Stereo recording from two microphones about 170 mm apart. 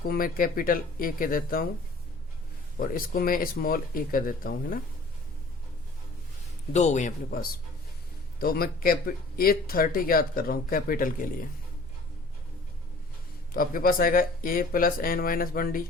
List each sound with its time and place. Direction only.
0.0 s speech: 60° left (ahead or behind)
2.7 s speech: 55° left (ahead or behind)
6.7 s a man's voice: 45° left (ahead or behind)
8.4 s speech: 60° left (ahead or behind)
13.5 s speech: 55° left (ahead or behind)